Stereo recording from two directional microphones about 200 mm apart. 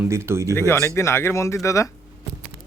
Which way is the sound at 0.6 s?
15° left (ahead or behind).